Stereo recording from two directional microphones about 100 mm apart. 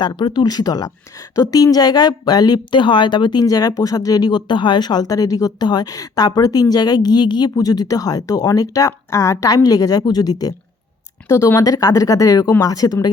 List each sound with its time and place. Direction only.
0.0 s speech: 50° left (ahead or behind); by 9.5 s 30° left (ahead or behind)
9.6 s speech: 40° left (ahead or behind)